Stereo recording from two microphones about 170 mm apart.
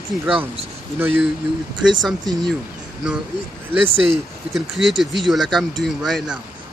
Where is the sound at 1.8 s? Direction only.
90° right.